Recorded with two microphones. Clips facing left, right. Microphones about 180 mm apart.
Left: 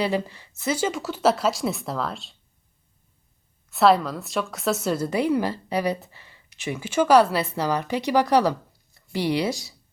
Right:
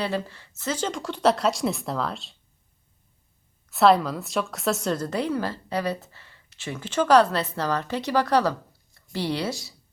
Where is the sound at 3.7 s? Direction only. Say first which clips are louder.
Even; centre (ahead or behind).